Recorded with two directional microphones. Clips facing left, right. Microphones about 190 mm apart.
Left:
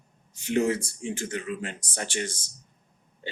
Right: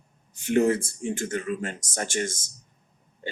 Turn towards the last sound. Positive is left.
turn(degrees=-50)  # may be behind; listen again after turning